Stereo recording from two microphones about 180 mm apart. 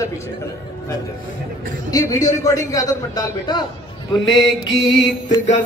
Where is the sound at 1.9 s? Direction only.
20° left (ahead or behind).